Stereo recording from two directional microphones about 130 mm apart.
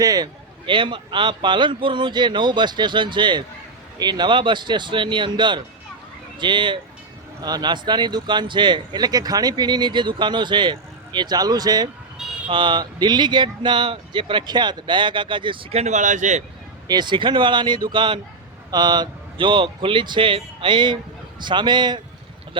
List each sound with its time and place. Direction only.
0.0 s speech: 30° right (ahead or behind)
15.8 s speech: 65° right (ahead or behind)
16.9 s speech: 35° right (ahead or behind)